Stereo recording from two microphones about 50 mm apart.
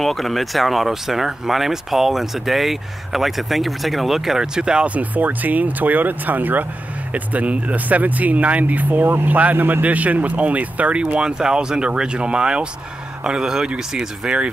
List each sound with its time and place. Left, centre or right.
0.0 s speech: centre
4.8 s speech: right
11.1 s speech: centre